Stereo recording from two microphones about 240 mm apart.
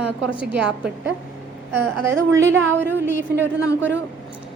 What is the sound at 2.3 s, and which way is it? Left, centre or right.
Speech, right.